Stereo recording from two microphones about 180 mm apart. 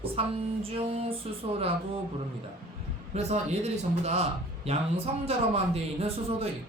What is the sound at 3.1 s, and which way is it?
Speech, 40° right (ahead or behind).